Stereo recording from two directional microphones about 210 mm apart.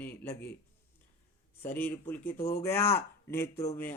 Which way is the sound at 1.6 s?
10° left (ahead or behind).